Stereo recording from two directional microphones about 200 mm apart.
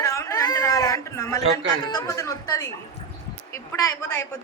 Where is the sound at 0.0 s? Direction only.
15° left (ahead or behind).